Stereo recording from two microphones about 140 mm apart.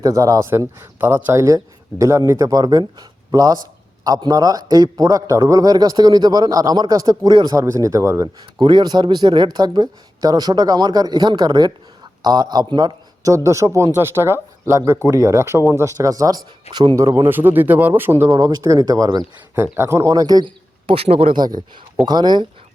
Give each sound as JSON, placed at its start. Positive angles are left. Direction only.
{"t": 0.0, "sound": "a man's voice", "side_deg": -25}
{"t": 8.6, "sound": "a man's voice", "side_deg": -30}
{"t": 21.3, "sound": "a man's voice", "side_deg": -30}